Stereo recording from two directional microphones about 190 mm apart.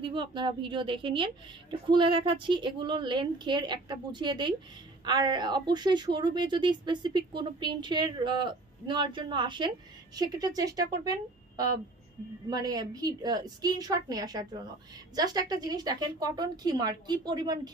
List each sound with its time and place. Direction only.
0.0 s a woman's voice: 25° right (ahead or behind)